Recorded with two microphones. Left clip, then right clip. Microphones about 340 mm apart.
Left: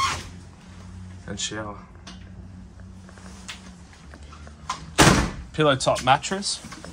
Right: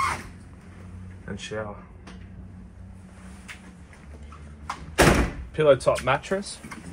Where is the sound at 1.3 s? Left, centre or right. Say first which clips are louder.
Left 2 dB; centre.